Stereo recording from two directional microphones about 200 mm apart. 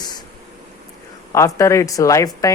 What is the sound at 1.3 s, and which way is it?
Speech, 15° left (ahead or behind).